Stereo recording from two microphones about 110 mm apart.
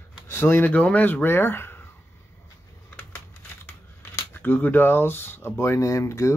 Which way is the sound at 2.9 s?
15° left (ahead or behind).